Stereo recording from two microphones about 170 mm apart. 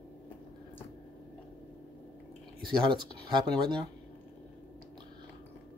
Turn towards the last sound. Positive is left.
turn(degrees=-25)  # may be behind; listen again after turning